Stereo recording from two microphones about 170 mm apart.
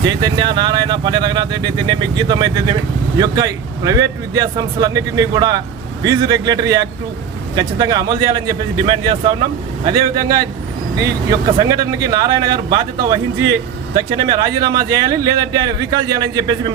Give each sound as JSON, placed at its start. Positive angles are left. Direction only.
{"t": 0.2, "sound": "speech", "side_deg": -25}
{"t": 11.6, "sound": "speech", "side_deg": -25}